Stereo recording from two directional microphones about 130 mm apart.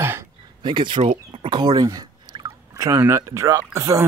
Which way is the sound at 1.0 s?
45° right (ahead or behind).